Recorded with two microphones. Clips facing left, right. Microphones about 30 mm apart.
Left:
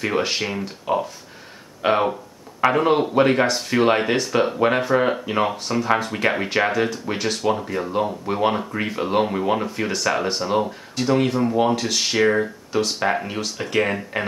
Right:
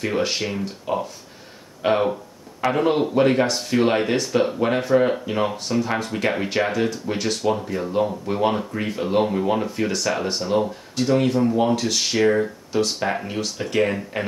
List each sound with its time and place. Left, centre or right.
0.0 s speech: centre